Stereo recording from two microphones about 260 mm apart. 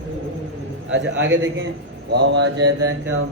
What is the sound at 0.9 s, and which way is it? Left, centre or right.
Mantra, right.